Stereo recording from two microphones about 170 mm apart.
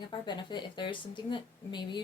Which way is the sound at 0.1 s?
25° left (ahead or behind).